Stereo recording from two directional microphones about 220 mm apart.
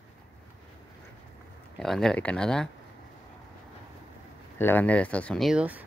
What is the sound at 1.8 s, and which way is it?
Speech, centre (ahead or behind).